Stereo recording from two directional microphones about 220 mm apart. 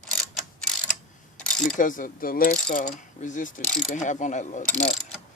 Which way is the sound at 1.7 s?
35° left (ahead or behind).